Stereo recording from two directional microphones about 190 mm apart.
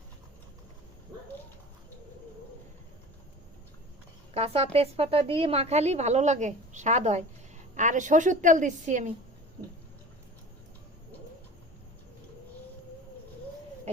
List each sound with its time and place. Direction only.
4.4 s a woman's voice: 30° right (ahead or behind)